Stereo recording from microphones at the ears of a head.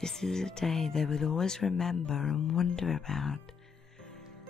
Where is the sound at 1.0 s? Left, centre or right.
Left.